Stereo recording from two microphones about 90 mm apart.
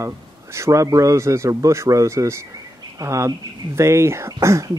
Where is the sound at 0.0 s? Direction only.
30° right (ahead or behind).